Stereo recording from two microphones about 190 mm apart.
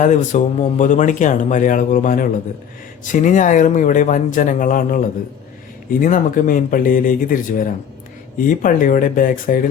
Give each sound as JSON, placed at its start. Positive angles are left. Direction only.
{"t": 0.0, "sound": "speech", "side_deg": 40}